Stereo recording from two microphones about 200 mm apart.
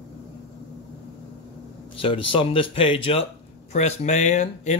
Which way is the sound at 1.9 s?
25° left (ahead or behind).